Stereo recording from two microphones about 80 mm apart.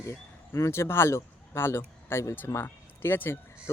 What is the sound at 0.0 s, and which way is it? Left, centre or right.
Speech, left.